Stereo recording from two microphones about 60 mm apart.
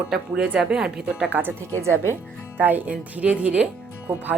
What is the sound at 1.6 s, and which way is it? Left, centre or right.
Speech, right.